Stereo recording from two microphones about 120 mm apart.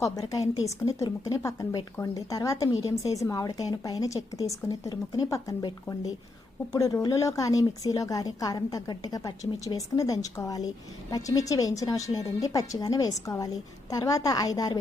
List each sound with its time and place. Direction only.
0.0 s speech: 30° left (ahead or behind)
6.7 s a woman's voice: 30° left (ahead or behind)